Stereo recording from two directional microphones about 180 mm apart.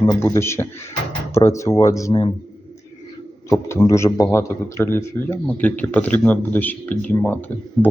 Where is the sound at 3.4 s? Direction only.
15° left (ahead or behind).